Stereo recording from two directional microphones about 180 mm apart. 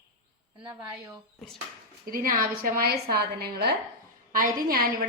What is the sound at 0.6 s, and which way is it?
Speech, 10° right (ahead or behind).